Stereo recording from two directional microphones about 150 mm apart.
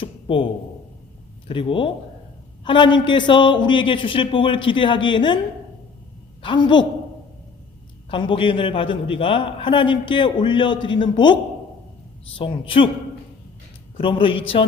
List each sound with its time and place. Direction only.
0.0 s a sound: 35° left (ahead or behind)
1.5 s a man's voice: 35° left (ahead or behind)
6.4 s a woman's voice: 30° left (ahead or behind)
8.1 s a man's voice: 35° left (ahead or behind)
12.4 s a man's voice: 35° left (ahead or behind)
13.9 s a man's voice: 35° left (ahead or behind)